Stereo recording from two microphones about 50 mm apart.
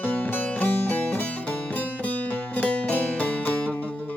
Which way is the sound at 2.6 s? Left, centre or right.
Left.